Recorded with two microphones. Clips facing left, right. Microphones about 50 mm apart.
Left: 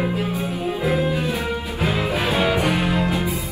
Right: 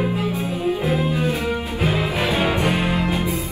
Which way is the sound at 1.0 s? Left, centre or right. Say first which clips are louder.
Right 1 dB; right.